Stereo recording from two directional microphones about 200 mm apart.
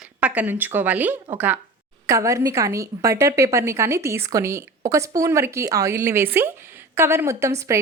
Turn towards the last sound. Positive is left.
turn(degrees=-15)  # may be behind; listen again after turning